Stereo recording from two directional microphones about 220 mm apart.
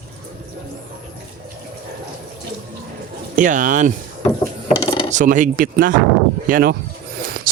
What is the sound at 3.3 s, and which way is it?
Speech, 35° right (ahead or behind).